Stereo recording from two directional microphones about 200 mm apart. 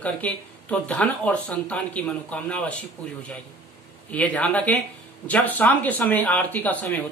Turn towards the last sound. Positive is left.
turn(degrees=10)  # may be behind; listen again after turning